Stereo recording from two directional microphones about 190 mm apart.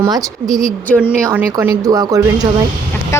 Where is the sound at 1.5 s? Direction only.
20° right (ahead or behind).